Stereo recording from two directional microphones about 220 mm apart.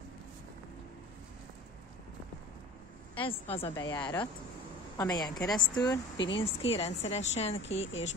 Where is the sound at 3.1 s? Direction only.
25° left (ahead or behind).